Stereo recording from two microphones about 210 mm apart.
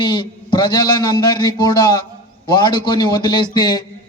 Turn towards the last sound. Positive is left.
turn(degrees=20)  # may be behind; listen again after turning